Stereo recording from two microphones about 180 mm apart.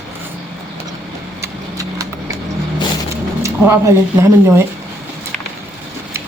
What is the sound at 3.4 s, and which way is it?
Speech, 15° right (ahead or behind).